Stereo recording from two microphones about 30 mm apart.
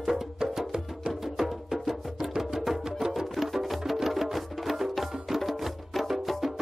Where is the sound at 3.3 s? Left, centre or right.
Centre.